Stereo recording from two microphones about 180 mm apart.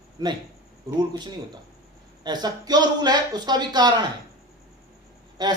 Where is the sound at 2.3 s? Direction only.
20° right (ahead or behind).